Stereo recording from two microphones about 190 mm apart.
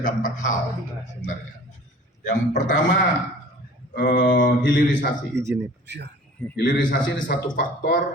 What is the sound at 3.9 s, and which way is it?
Speech, 45° left (ahead or behind).